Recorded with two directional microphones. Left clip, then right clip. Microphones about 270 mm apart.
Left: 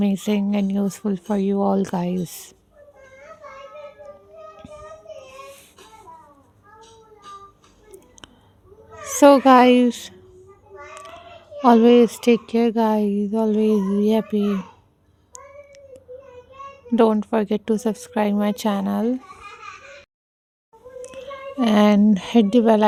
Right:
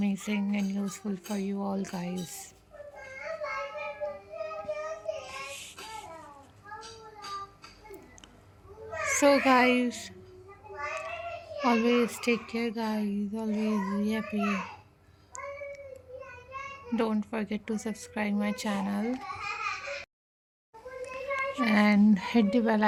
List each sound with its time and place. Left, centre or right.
0.0 s speech: left
9.1 s speech: left
11.6 s speech: left
16.9 s speech: left
21.2 s a child's voice: left